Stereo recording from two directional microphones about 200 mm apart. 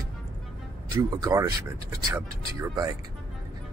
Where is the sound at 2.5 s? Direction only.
15° right (ahead or behind).